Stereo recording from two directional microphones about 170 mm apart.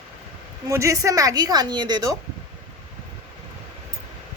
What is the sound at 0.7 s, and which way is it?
A woman's voice, 20° right (ahead or behind).